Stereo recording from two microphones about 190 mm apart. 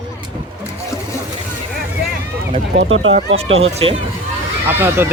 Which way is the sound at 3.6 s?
30° right (ahead or behind).